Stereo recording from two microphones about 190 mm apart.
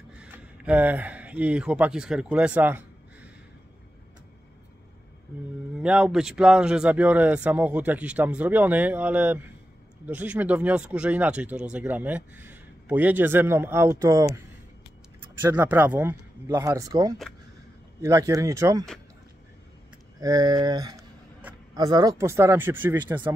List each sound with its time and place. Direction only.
0.2 s speech: 5° right (ahead or behind)
5.8 s speech: 5° right (ahead or behind)
15.4 s speech: 10° right (ahead or behind)
20.2 s speech: 20° right (ahead or behind)